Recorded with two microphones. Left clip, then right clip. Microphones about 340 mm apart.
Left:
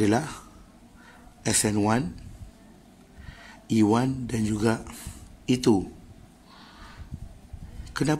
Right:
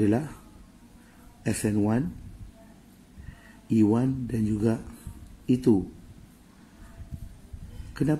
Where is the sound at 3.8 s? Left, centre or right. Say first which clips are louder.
Left 3 dB; left.